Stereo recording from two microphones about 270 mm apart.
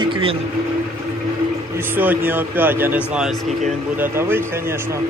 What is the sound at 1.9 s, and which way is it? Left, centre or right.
A man's voice, centre.